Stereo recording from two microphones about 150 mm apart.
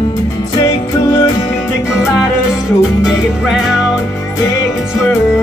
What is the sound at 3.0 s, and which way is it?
Music, centre (ahead or behind).